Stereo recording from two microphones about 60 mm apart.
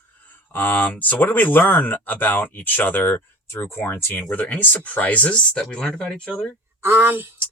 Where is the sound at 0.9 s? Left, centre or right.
Left.